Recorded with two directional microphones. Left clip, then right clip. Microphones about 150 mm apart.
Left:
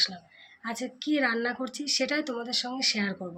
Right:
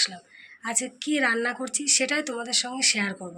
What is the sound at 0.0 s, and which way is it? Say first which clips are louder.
A woman's voice: right 1 dB; 10° left (ahead or behind).